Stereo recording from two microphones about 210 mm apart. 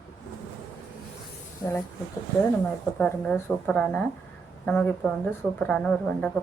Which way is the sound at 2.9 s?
5° left (ahead or behind).